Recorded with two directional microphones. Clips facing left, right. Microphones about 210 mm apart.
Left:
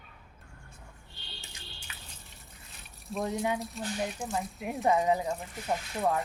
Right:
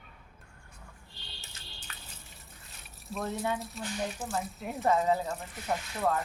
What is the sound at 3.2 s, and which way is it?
Speech, 15° left (ahead or behind).